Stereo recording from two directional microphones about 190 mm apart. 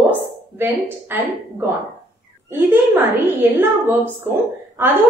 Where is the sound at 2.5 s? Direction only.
10° right (ahead or behind).